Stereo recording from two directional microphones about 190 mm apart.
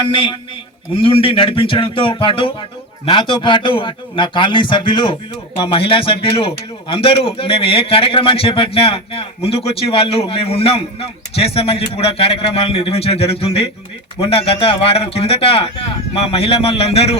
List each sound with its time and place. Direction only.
0.1 s a man's voice: 25° left (ahead or behind)